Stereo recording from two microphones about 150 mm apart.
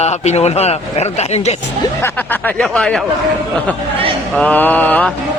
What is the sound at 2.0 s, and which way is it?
A man's voice, 10° left (ahead or behind).